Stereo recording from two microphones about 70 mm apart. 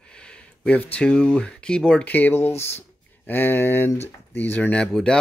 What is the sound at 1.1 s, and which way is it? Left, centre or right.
Speech, centre.